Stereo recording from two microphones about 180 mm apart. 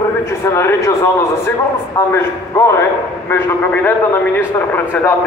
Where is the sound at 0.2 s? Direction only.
15° left (ahead or behind).